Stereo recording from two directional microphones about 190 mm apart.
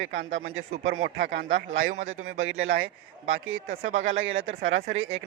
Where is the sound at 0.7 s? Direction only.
40° right (ahead or behind); by 1.6 s 70° right (ahead or behind).